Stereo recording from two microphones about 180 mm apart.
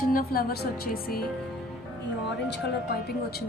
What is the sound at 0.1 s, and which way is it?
A woman's voice, 55° left (ahead or behind).